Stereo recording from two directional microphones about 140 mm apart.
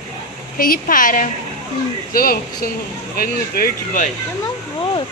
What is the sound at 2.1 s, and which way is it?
Speech, 90° left.